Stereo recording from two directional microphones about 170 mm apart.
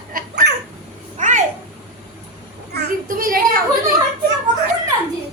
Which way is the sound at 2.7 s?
65° right (ahead or behind).